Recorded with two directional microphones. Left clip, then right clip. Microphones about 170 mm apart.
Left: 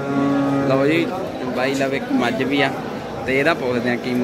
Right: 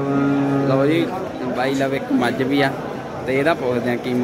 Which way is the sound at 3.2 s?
5° right (ahead or behind).